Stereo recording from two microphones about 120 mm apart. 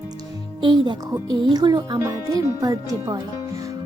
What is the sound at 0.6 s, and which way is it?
Speech, 45° right (ahead or behind).